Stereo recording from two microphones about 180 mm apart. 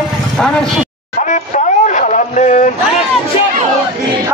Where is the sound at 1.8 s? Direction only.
45° left (ahead or behind).